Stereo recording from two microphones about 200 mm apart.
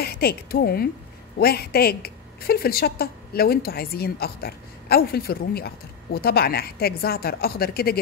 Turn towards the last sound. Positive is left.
turn(degrees=50)  # may be behind; listen again after turning